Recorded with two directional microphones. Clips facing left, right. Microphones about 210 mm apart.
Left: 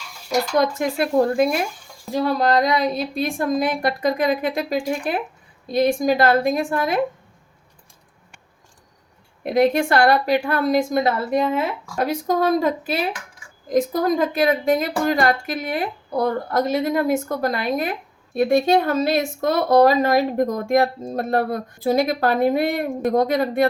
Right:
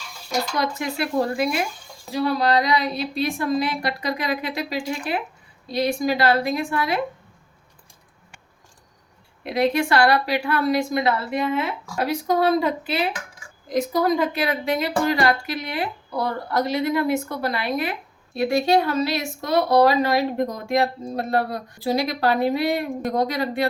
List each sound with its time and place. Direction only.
0.6 s speech: 50° left (ahead or behind)
9.4 s speech: 50° left (ahead or behind)